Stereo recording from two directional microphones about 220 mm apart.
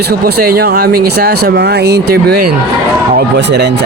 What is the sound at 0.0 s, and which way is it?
Speech, 45° right (ahead or behind).